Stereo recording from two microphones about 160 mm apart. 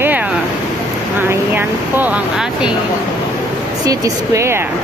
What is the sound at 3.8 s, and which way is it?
Speech, 20° right (ahead or behind).